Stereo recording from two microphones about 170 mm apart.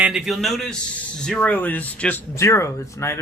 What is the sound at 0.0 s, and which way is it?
A man's voice, 5° right (ahead or behind).